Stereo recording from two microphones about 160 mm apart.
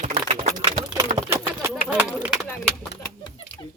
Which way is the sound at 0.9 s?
25° right (ahead or behind).